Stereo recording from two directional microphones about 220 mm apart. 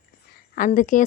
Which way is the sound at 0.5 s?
35° left (ahead or behind).